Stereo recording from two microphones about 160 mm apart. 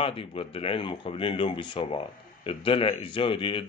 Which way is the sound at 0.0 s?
35° left (ahead or behind).